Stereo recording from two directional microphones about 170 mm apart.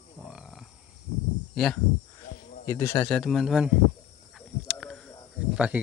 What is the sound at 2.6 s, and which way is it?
Speech, 15° left (ahead or behind).